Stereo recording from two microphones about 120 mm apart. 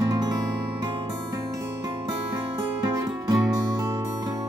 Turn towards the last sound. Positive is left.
turn(degrees=-30)  # may be behind; listen again after turning